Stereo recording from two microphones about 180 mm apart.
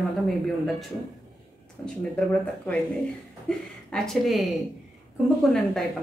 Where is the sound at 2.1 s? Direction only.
5° left (ahead or behind).